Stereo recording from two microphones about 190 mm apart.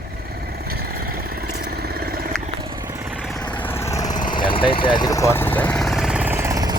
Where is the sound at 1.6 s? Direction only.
55° right (ahead or behind).